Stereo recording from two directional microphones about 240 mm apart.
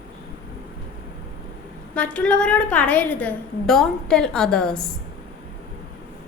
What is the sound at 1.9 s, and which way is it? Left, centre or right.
A woman's voice, centre.